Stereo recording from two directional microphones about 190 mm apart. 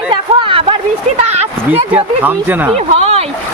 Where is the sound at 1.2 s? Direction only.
35° right (ahead or behind).